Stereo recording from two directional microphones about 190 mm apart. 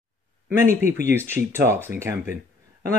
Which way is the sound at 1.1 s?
10° right (ahead or behind).